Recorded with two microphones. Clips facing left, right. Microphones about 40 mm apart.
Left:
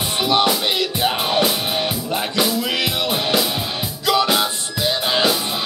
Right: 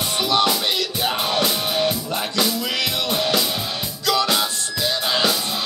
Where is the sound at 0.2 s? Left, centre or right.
Left.